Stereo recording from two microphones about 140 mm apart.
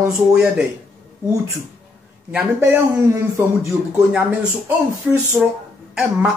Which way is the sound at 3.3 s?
20° right (ahead or behind).